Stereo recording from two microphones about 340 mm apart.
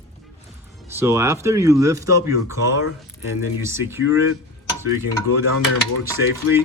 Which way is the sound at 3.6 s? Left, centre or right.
Centre.